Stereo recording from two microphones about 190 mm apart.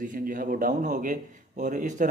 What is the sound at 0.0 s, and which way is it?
A man's voice, 45° right (ahead or behind).